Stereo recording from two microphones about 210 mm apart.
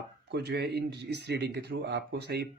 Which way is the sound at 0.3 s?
55° right (ahead or behind).